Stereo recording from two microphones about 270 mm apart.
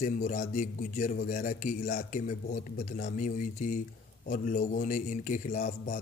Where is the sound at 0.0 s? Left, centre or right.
Left.